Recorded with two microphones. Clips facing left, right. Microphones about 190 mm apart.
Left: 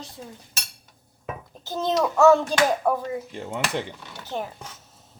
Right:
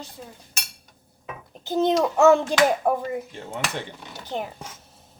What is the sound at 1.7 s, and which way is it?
A child's voice, 20° right (ahead or behind).